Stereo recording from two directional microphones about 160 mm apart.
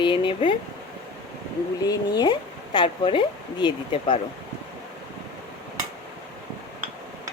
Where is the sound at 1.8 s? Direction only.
25° left (ahead or behind).